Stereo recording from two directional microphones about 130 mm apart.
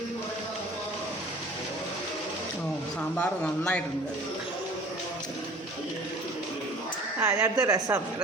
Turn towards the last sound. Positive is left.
turn(degrees=-25)  # may be behind; listen again after turning